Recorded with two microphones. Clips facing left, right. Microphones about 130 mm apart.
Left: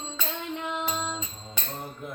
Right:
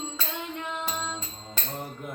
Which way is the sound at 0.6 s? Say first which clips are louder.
Left 4 dB; 15° left (ahead or behind).